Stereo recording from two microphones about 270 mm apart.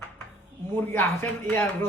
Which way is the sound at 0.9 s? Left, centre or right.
Centre.